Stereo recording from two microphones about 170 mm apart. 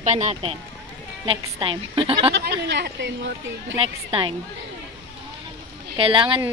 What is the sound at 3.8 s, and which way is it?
Speech, 35° right (ahead or behind).